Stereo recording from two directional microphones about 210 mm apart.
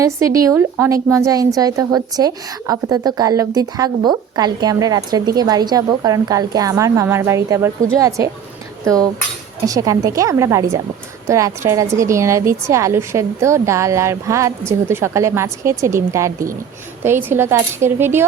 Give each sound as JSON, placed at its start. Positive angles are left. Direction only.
{"t": 0.0, "sound": "a woman's voice", "side_deg": -15}